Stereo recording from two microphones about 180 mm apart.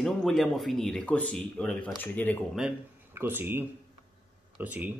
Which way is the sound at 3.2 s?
10° right (ahead or behind).